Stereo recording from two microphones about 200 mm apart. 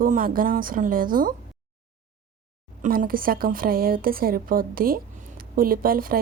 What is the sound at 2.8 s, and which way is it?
A woman's voice, 45° right (ahead or behind).